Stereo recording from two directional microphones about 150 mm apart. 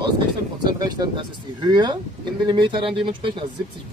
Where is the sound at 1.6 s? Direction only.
30° right (ahead or behind).